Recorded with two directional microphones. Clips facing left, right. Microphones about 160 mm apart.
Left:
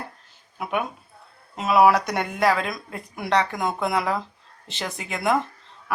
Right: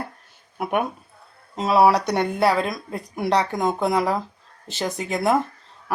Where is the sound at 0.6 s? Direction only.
50° right (ahead or behind).